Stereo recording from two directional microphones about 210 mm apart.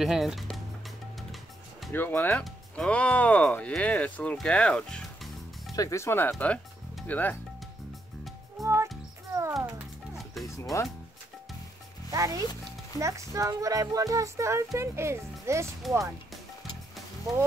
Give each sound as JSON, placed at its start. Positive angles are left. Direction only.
{"t": 0.0, "sound": "speech", "side_deg": 0}
{"t": 1.8, "sound": "speech", "side_deg": 10}
{"t": 5.8, "sound": "speech", "side_deg": 15}
{"t": 8.5, "sound": "music", "side_deg": -15}
{"t": 10.5, "sound": "music", "side_deg": 15}
{"t": 12.1, "sound": "speech", "side_deg": -15}
{"t": 17.2, "sound": "speech", "side_deg": -15}